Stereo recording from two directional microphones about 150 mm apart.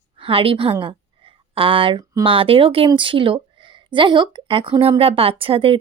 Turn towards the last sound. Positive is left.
turn(degrees=-35)  # may be behind; listen again after turning